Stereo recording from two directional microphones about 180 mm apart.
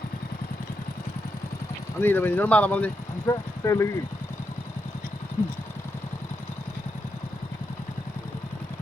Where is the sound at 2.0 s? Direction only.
10° left (ahead or behind).